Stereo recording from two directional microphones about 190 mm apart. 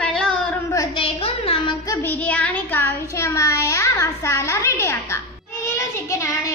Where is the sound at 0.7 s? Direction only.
25° left (ahead or behind).